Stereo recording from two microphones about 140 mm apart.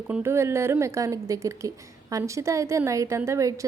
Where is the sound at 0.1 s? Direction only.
15° right (ahead or behind).